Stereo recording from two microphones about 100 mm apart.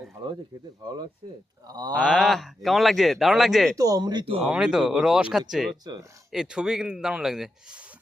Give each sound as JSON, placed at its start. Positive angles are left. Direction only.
{"t": 0.8, "sound": "speech", "side_deg": -45}
{"t": 2.0, "sound": "speech", "side_deg": -5}
{"t": 3.8, "sound": "speech", "side_deg": -35}
{"t": 4.4, "sound": "speech", "side_deg": -10}
{"t": 5.8, "sound": "speech", "side_deg": -40}
{"t": 6.3, "sound": "speech", "side_deg": -5}